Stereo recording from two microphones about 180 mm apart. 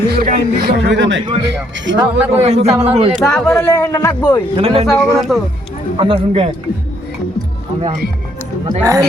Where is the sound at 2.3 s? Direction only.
35° right (ahead or behind).